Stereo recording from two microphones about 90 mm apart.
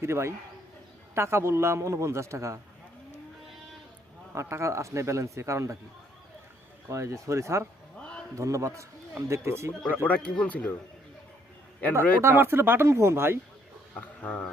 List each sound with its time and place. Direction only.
0.0 s a man's voice: 30° right (ahead or behind)
4.4 s a man's voice: 30° right (ahead or behind)
6.8 s a man's voice: 30° right (ahead or behind)
7.9 s a sound: 10° left (ahead or behind)
8.4 s a man's voice: 35° right (ahead or behind)
9.9 s speech: 20° left (ahead or behind)
11.8 s speech: 15° left (ahead or behind)
12.2 s speech: 25° right (ahead or behind)
14.2 s speech: 20° left (ahead or behind)